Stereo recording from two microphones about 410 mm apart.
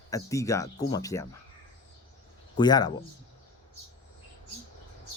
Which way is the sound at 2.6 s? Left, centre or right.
Centre.